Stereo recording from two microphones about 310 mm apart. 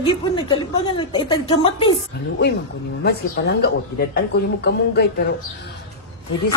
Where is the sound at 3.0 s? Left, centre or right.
Left.